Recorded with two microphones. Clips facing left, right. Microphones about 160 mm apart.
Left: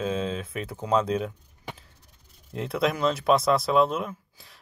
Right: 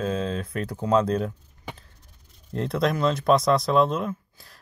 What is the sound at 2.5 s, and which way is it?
Speech, 5° left (ahead or behind).